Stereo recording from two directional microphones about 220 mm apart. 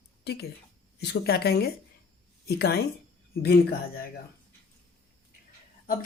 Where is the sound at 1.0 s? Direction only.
50° left (ahead or behind).